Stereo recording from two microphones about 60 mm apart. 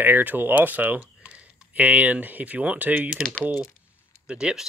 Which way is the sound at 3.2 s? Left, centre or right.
Centre.